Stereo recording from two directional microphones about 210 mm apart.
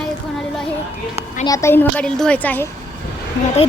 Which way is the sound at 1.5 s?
15° left (ahead or behind).